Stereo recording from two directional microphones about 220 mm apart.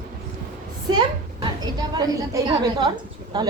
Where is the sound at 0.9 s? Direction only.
20° right (ahead or behind).